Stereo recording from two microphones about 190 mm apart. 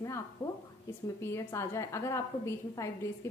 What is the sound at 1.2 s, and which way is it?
A woman's voice, 15° left (ahead or behind).